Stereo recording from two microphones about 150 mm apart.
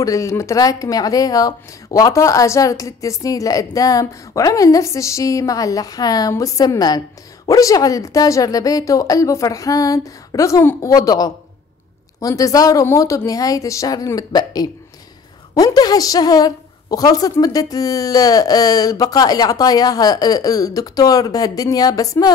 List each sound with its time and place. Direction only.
0.0 s speech: 20° left (ahead or behind)